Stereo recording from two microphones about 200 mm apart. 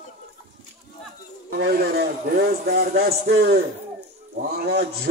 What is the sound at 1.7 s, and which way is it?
Speech, 50° right (ahead or behind).